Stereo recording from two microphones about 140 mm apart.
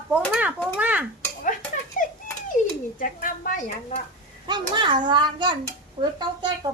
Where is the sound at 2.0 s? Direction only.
75° left (ahead or behind).